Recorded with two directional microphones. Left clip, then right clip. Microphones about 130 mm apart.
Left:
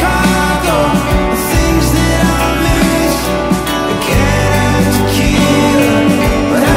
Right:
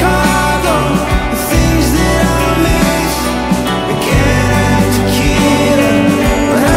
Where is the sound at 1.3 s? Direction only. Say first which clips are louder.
Even; centre (ahead or behind).